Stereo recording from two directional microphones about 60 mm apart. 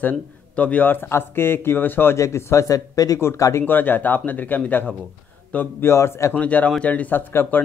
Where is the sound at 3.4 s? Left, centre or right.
Left.